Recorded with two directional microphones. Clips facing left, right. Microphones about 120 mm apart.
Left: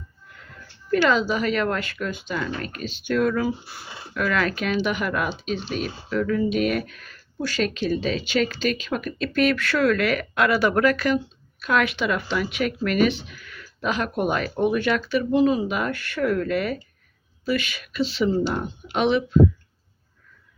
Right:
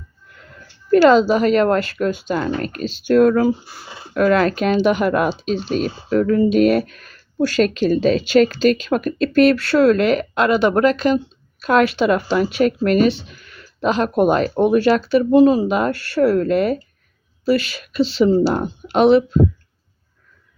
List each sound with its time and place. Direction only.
0.9 s speech: 40° right (ahead or behind); by 11.2 s 25° right (ahead or behind)
11.6 s speech: 35° right (ahead or behind)